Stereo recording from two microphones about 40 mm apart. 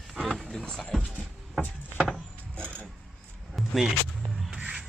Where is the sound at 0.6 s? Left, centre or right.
Centre.